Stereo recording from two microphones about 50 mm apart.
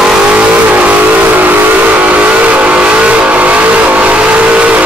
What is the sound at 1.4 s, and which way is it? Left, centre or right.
Vehicle, right.